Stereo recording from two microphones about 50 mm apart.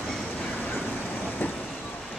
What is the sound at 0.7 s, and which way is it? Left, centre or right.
Vehicle, left.